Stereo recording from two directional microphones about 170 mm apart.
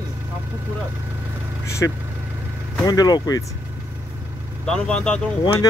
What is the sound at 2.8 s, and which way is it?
Speech, 25° left (ahead or behind).